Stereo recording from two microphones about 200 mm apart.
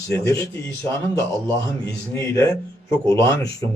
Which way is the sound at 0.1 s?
15° left (ahead or behind).